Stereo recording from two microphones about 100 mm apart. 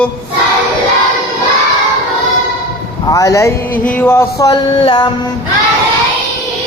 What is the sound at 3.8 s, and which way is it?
Speech, 20° left (ahead or behind).